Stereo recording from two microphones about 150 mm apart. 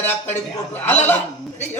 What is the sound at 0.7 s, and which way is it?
Speech, 10° left (ahead or behind).